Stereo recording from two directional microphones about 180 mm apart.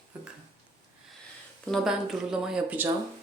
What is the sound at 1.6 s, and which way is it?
Speech, centre (ahead or behind).